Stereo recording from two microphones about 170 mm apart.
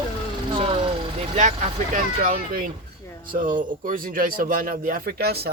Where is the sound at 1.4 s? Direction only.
45° right (ahead or behind).